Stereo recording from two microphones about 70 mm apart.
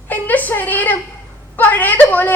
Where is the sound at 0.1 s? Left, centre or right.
Left.